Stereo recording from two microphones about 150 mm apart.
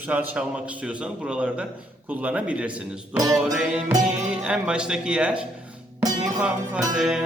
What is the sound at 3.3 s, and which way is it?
Music, 5° right (ahead or behind).